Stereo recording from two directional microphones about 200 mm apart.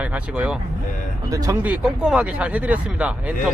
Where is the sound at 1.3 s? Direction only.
20° right (ahead or behind).